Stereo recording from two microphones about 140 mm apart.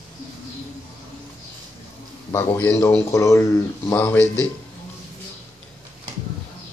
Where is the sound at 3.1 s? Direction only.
20° left (ahead or behind).